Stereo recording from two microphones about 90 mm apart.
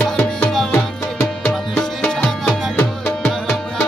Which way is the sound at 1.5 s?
5° left (ahead or behind).